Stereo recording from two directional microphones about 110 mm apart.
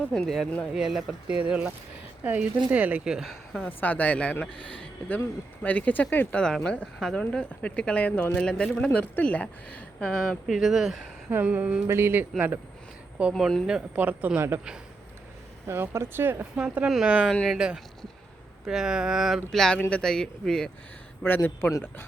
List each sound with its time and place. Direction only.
0.1 s speech: 5° left (ahead or behind)
3.7 s speech: 15° left (ahead or behind); by 10.9 s centre (ahead or behind)
11.3 s speech: 15° right (ahead or behind)
13.3 s speech: 5° left (ahead or behind)
13.7 s speech: 10° right (ahead or behind)
15.6 s speech: 20° right (ahead or behind)
17.3 s speech: 5° left (ahead or behind)
18.6 s speech: 5° right (ahead or behind)
21.2 s speech: 20° left (ahead or behind)